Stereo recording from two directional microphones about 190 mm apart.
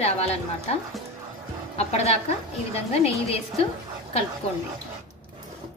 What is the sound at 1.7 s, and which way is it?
A woman's voice, 35° left (ahead or behind).